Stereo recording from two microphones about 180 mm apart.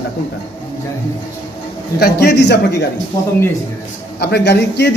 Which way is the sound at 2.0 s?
65° left (ahead or behind).